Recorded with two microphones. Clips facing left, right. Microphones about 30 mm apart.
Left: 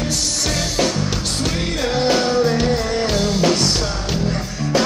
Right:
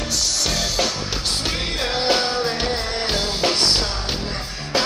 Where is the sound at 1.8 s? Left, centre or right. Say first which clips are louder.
Left 3 dB; right.